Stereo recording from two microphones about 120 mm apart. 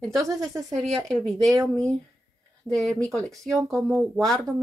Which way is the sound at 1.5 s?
30° right (ahead or behind).